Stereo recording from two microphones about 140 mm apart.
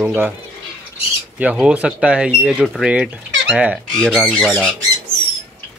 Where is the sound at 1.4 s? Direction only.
5° right (ahead or behind).